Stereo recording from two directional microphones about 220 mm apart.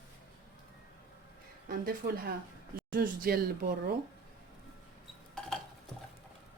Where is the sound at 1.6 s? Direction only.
40° right (ahead or behind).